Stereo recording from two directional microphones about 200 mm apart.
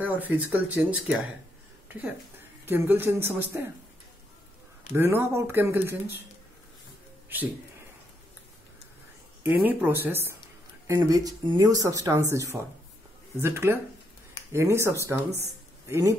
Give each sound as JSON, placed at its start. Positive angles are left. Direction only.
{"t": 0.0, "sound": "speech", "side_deg": -10}
{"t": 4.9, "sound": "speech", "side_deg": -10}
{"t": 7.3, "sound": "speech", "side_deg": -10}
{"t": 9.4, "sound": "speech", "side_deg": -10}